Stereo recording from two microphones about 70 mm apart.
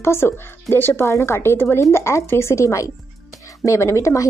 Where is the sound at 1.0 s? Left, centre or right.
Left.